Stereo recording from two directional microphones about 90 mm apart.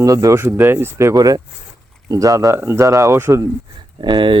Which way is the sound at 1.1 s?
45° right (ahead or behind).